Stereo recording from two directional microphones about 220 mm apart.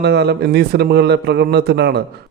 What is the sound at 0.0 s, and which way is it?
Speech, 50° right (ahead or behind).